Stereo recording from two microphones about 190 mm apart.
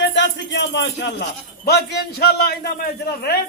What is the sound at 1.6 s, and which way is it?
Speech, 60° left (ahead or behind).